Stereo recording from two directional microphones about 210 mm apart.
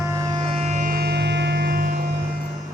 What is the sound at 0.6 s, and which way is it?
Music, 40° right (ahead or behind).